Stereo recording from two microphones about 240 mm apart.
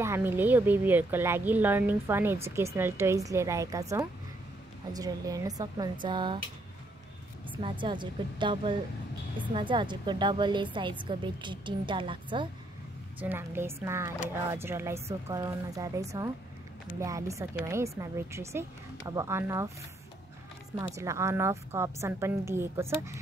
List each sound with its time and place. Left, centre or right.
0.0 s speech: centre
4.9 s a woman's voice: centre
7.5 s a woman's voice: centre
13.2 s speech: centre
20.8 s speech: centre